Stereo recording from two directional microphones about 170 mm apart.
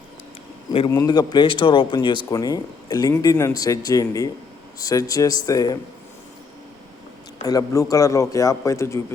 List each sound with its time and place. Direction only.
0.9 s speech: 20° left (ahead or behind)
7.4 s speech: 20° left (ahead or behind)